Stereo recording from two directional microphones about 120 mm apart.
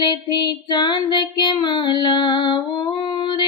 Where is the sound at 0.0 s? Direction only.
40° left (ahead or behind).